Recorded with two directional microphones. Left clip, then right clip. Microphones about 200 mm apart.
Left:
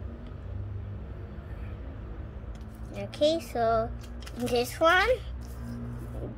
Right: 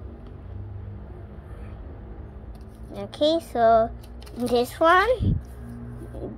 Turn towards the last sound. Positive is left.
turn(degrees=-15)  # may be behind; listen again after turning